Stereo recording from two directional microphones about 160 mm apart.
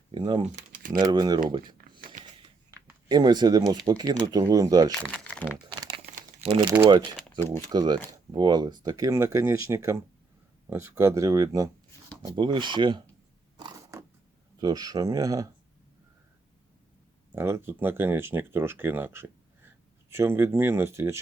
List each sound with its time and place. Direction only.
0.1 s speech: 30° right (ahead or behind)
0.5 s typing: 60° right (ahead or behind)
0.9 s speech: 25° right (ahead or behind)
1.8 s a sound: 60° right (ahead or behind)
2.6 s a sound: 25° right (ahead or behind)
3.8 s speech: 25° right (ahead or behind)
5.0 s crumpling: 5° left (ahead or behind)
6.7 s speech: 15° right (ahead or behind)
7.3 s speech: 15° left (ahead or behind)
7.7 s speech: 25° right (ahead or behind)
13.6 s mechanisms: 25° right (ahead or behind)
14.6 s speech: 25° right (ahead or behind)
17.3 s speech: 15° right (ahead or behind)